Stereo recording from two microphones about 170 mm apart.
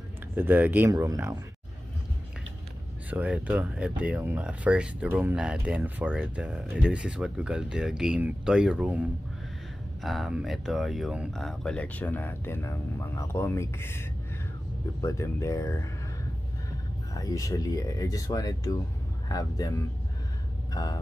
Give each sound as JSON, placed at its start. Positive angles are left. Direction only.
{"t": 0.4, "sound": "speech", "side_deg": -10}
{"t": 3.1, "sound": "speech", "side_deg": -10}
{"t": 10.0, "sound": "speech", "side_deg": 0}
{"t": 17.2, "sound": "speech", "side_deg": 20}
{"t": 20.7, "sound": "speech", "side_deg": 20}